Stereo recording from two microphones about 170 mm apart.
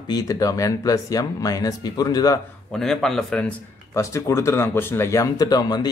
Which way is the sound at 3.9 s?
15° left (ahead or behind).